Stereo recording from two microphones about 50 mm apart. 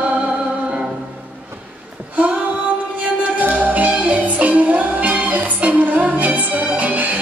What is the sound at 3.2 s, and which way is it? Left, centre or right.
Music, right.